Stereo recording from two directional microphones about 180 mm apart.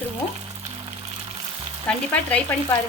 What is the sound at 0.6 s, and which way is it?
Music, 25° right (ahead or behind).